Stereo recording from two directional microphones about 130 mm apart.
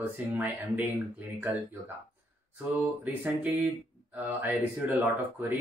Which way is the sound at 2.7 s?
15° right (ahead or behind).